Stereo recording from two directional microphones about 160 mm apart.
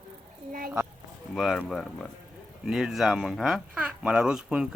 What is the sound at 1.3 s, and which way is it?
Speech, centre (ahead or behind).